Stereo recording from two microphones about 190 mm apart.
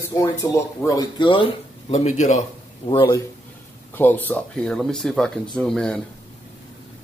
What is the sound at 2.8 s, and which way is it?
Speech, 25° left (ahead or behind).